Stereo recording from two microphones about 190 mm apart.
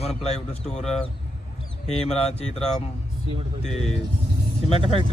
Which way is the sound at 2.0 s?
35° left (ahead or behind).